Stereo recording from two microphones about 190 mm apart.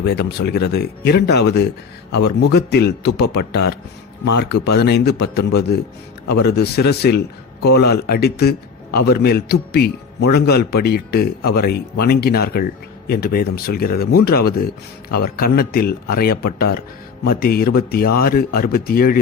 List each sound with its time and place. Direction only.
0.0 s a man's voice: 60° left (ahead or behind)